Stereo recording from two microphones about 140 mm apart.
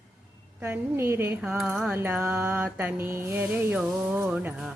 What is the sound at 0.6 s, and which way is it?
Mantra, 10° right (ahead or behind).